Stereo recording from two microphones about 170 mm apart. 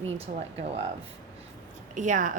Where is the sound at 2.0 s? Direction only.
45° right (ahead or behind).